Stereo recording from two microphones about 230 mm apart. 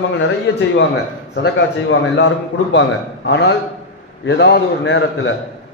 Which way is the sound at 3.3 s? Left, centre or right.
Left.